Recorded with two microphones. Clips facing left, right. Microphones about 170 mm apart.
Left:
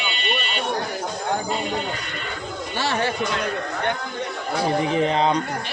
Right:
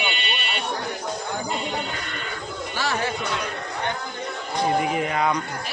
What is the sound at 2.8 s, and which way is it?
Chatter, 30° left (ahead or behind).